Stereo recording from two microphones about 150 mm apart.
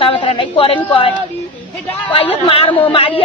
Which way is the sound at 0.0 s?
40° left (ahead or behind).